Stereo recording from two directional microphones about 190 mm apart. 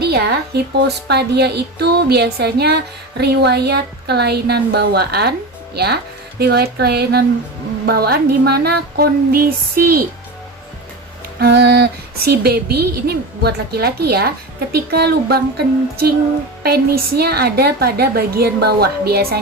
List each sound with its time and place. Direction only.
0.0 s speech: 55° right (ahead or behind)
1.0 s music: 60° right (ahead or behind)
7.9 s speech: 55° right (ahead or behind)
11.3 s music: 60° right (ahead or behind)